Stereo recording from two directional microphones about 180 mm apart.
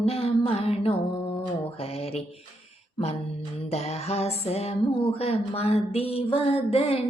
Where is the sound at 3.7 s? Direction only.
35° left (ahead or behind).